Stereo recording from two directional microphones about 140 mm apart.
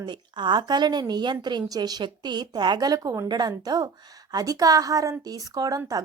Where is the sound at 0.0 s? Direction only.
35° right (ahead or behind).